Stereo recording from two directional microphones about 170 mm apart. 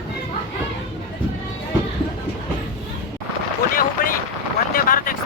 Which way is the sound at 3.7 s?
55° left (ahead or behind).